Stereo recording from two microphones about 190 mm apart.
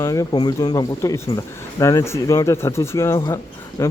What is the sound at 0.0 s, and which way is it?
Speech, 15° left (ahead or behind).